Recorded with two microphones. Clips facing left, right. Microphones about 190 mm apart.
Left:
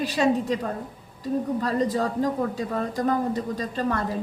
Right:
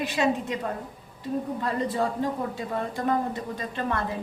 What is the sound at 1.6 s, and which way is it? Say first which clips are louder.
Speech: left 3 dB; 40° left (ahead or behind).